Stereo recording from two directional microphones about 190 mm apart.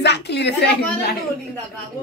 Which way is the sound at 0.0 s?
65° left (ahead or behind).